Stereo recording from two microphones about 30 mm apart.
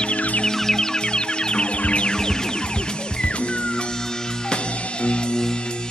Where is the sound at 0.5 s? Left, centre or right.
Centre; by 2.1 s left.